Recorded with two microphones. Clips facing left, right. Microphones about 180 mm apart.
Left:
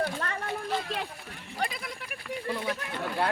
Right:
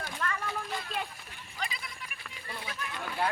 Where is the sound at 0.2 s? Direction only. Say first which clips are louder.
Right 1 dB; 45° left (ahead or behind).